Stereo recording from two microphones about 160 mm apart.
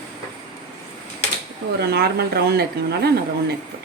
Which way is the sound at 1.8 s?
85° right.